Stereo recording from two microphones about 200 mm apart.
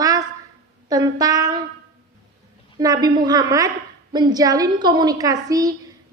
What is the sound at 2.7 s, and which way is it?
A woman's voice, 20° right (ahead or behind).